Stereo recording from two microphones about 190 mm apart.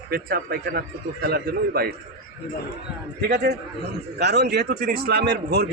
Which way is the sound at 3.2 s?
60° right (ahead or behind).